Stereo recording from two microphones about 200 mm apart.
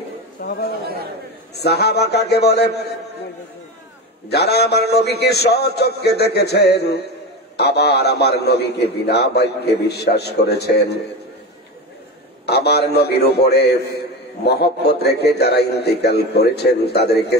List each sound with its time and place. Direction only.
0.4 s chatter: 45° left (ahead or behind)
1.5 s a man's voice: 55° left (ahead or behind)
4.3 s a man's voice: 55° left (ahead or behind)
12.4 s a man's voice: 55° left (ahead or behind)